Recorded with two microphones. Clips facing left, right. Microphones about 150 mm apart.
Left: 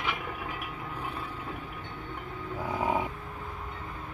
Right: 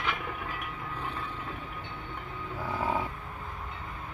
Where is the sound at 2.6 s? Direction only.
15° left (ahead or behind).